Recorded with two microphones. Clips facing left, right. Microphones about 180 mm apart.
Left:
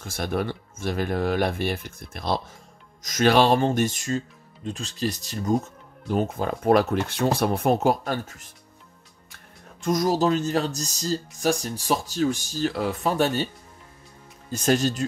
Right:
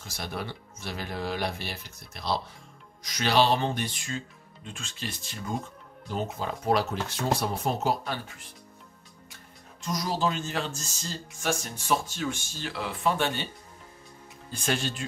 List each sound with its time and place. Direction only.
0.0 s speech: 50° left (ahead or behind)
9.8 s speech: 50° left (ahead or behind)
14.5 s speech: 40° left (ahead or behind)